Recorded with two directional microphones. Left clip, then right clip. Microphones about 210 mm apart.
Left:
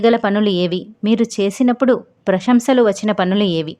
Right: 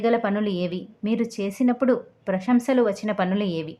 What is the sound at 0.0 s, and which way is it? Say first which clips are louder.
A woman's voice: left 8 dB; 40° left (ahead or behind).